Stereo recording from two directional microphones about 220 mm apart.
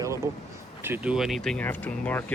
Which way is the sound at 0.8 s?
10° right (ahead or behind).